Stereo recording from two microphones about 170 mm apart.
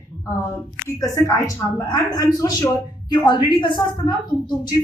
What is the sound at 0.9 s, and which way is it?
A woman's voice, 20° left (ahead or behind).